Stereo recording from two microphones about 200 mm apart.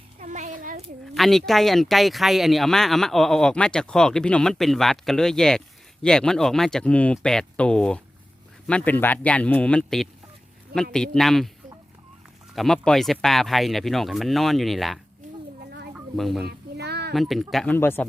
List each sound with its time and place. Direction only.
0.2 s a child's voice: 35° right (ahead or behind)
1.1 s speech: centre (ahead or behind)
12.5 s speech: centre (ahead or behind)
16.1 s speech: centre (ahead or behind)
16.4 s a sound: 55° right (ahead or behind)
17.2 s speech: centre (ahead or behind)